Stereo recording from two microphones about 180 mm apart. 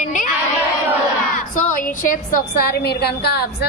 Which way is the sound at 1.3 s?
45° left (ahead or behind).